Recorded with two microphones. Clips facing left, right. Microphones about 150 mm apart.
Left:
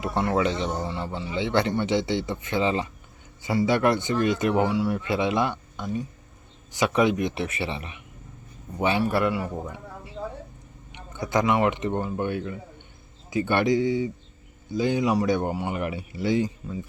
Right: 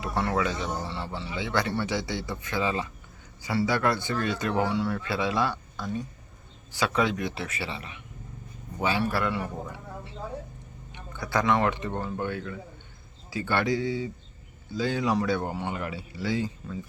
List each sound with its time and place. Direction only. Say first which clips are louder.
0.0 s speech: left 3 dB; 20° left (ahead or behind)
10.9 s speech: left 3 dB; 20° left (ahead or behind)